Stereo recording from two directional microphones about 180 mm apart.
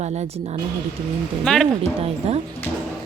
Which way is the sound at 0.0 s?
40° right (ahead or behind).